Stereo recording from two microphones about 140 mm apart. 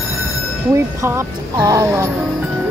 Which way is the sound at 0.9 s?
20° right (ahead or behind).